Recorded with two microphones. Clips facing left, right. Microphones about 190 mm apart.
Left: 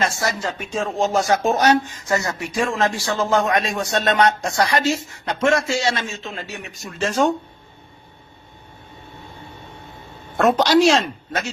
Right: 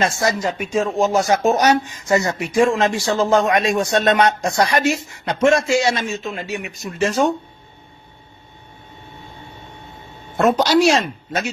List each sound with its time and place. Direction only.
0.0 s a man's voice: 20° right (ahead or behind)
10.3 s a woman's voice: 5° right (ahead or behind)